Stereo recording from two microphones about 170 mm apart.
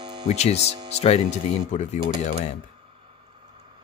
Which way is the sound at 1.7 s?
40° left (ahead or behind).